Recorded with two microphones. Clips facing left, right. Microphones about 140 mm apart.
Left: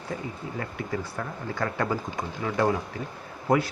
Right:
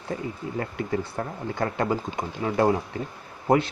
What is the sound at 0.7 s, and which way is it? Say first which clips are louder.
Speech: right 4 dB; 25° right (ahead or behind).